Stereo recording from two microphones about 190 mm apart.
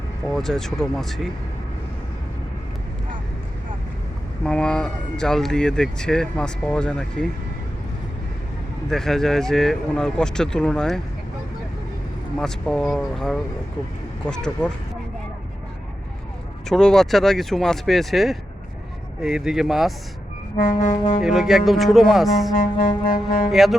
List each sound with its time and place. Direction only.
0.3 s speech: centre (ahead or behind)
4.4 s speech: 5° left (ahead or behind)
8.9 s speech: centre (ahead or behind)
12.4 s speech: 5° left (ahead or behind)
16.6 s speech: centre (ahead or behind)
20.6 s music: 45° left (ahead or behind)
21.2 s speech: centre (ahead or behind)
22.8 s music: 45° left (ahead or behind)
23.5 s speech: centre (ahead or behind)